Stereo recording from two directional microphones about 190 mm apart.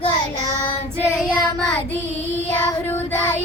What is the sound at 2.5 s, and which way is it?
Child singing, 15° left (ahead or behind).